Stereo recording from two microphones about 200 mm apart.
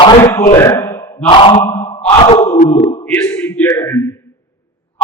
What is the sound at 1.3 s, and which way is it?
Speech, 25° left (ahead or behind).